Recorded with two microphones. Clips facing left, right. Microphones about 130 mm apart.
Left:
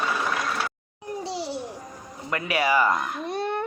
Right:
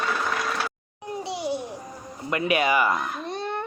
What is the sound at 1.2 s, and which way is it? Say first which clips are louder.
Babbling: right 3 dB; 20° right (ahead or behind).